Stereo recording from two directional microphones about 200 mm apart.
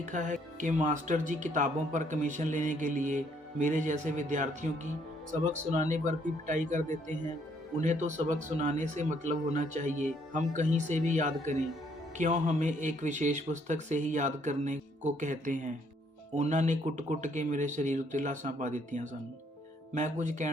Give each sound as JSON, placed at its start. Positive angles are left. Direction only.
{"t": 0.1, "sound": "speech", "side_deg": -40}